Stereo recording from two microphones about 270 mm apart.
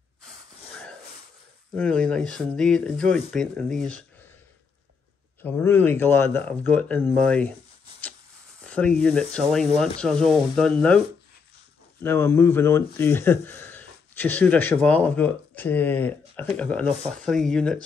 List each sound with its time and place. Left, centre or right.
0.7 s a sound: centre
1.8 s speech: centre
5.4 s speech: centre
8.6 s speech: centre
12.0 s speech: centre